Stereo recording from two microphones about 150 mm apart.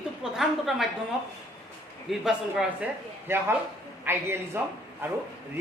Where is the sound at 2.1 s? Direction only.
5° right (ahead or behind).